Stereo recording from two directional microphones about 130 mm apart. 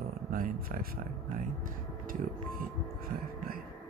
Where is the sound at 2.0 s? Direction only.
90° right.